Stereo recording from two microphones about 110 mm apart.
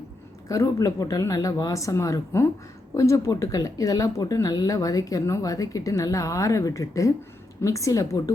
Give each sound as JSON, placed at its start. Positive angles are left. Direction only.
{"t": 0.4, "sound": "speech", "side_deg": 30}